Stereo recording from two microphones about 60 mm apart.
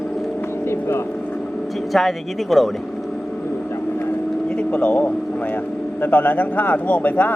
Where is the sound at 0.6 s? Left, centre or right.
Left.